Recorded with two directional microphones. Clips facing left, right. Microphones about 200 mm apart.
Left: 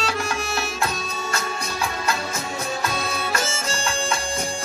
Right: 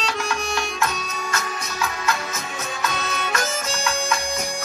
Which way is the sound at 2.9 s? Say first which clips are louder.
Left 1 dB; 30° left (ahead or behind).